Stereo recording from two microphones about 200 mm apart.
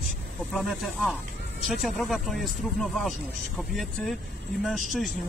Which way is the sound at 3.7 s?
Centre (ahead or behind).